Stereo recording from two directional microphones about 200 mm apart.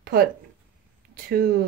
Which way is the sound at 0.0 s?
50° right (ahead or behind).